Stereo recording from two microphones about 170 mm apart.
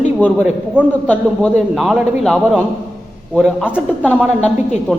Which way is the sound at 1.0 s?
5° left (ahead or behind).